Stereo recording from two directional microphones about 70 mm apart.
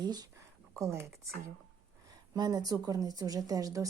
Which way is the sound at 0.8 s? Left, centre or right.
Right.